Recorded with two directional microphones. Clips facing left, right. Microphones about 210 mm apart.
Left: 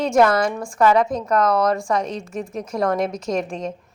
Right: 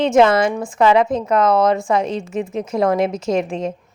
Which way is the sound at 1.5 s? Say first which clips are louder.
Right 5 dB; 25° right (ahead or behind).